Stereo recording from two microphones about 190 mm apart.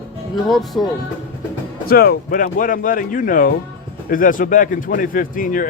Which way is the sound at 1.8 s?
55° left (ahead or behind).